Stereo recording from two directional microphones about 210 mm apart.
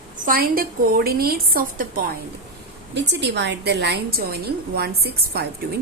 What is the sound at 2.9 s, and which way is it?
A woman's voice, 55° right (ahead or behind).